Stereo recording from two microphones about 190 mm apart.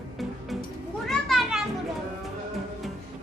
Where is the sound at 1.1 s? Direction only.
Centre (ahead or behind).